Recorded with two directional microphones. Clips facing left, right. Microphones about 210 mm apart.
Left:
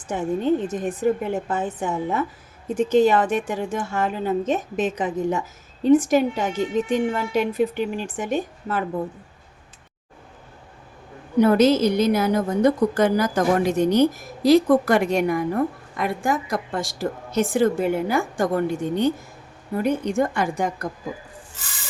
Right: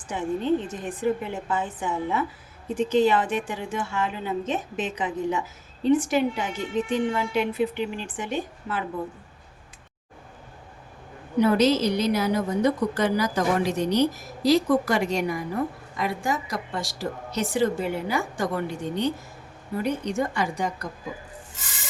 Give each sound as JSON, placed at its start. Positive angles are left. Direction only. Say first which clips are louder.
{"t": 0.7, "sound": "a woman's voice", "louder": "left 4 dB", "side_deg": 45}
{"t": 11.3, "sound": "a woman's voice", "louder": "left 4 dB", "side_deg": 50}